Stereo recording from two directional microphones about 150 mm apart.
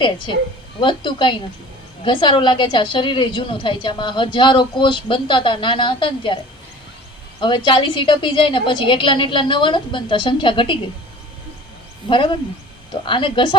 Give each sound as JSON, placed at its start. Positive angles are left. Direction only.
{"t": 0.8, "sound": "a woman's voice", "side_deg": 35}
{"t": 12.0, "sound": "a woman's voice", "side_deg": 35}